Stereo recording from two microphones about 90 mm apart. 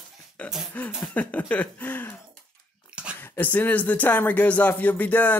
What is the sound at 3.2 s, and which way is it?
Speech, 20° left (ahead or behind).